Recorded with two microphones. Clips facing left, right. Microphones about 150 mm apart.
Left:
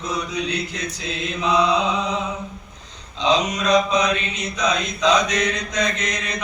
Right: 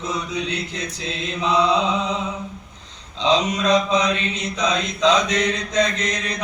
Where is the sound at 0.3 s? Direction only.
25° right (ahead or behind).